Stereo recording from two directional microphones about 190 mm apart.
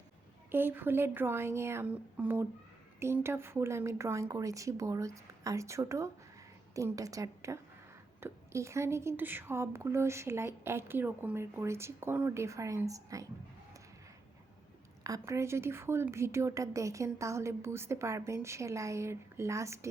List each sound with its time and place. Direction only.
0.5 s a woman's voice: 10° right (ahead or behind)
15.0 s a woman's voice: 15° right (ahead or behind)